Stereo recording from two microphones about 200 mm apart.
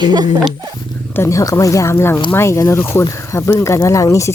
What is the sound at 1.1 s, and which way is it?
Speech, 15° left (ahead or behind).